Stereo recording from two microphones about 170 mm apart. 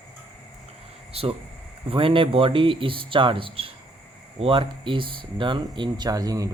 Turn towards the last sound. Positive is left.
turn(degrees=-20)  # may be behind; listen again after turning